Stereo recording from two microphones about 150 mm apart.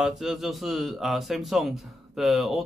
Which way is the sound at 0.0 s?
Centre (ahead or behind).